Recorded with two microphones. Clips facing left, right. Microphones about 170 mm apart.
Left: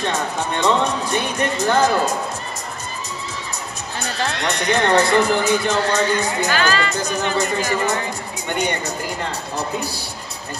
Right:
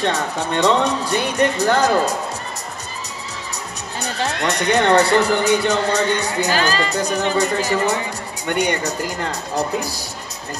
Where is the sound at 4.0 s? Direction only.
75° right (ahead or behind).